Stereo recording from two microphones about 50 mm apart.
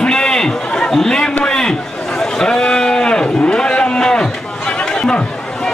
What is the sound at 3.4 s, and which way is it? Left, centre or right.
Livestock, centre.